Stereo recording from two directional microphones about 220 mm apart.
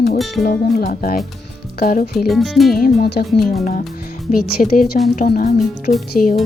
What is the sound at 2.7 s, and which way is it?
Speech, 45° left (ahead or behind).